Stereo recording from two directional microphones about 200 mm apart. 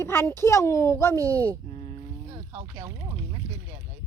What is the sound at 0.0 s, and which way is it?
A child's voice, 10° left (ahead or behind).